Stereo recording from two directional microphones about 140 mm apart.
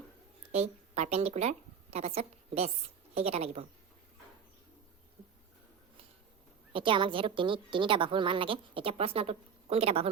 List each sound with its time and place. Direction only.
0.5 s a woman's voice: 50° right (ahead or behind)
6.7 s a woman's voice: 35° right (ahead or behind)